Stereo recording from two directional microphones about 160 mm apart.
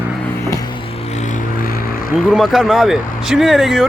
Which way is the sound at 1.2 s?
50° left (ahead or behind).